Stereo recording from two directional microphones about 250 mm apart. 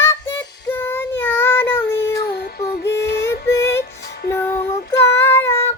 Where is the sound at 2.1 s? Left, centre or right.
Left.